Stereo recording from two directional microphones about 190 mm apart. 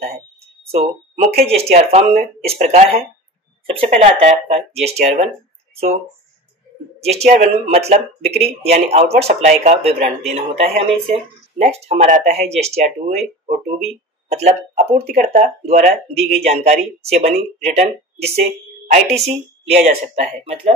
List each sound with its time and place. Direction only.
0.7 s speech: 50° right (ahead or behind)
1.4 s speech: 30° right (ahead or behind)
7.0 s speech: 35° right (ahead or behind)